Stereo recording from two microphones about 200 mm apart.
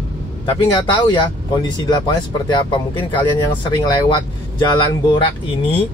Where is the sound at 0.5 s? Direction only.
25° left (ahead or behind).